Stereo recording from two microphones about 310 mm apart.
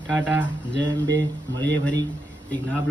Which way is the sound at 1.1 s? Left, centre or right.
Right.